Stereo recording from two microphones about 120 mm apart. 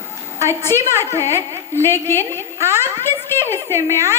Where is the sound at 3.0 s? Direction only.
20° left (ahead or behind).